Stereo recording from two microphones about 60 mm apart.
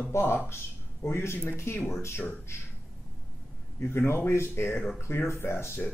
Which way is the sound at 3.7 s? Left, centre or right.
Left.